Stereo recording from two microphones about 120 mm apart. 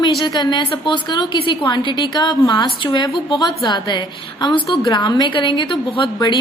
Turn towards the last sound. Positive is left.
turn(degrees=40)  # may be behind; listen again after turning